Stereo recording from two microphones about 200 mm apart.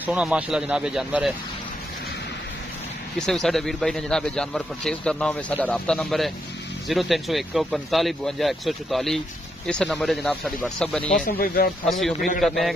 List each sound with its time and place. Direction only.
0.0 s a man's voice: 5° right (ahead or behind)
3.2 s a man's voice: centre (ahead or behind)
11.1 s speech: 45° left (ahead or behind)
11.8 s a man's voice: centre (ahead or behind)